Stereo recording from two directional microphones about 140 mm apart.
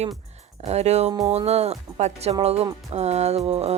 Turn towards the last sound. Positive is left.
turn(degrees=-50)  # may be behind; listen again after turning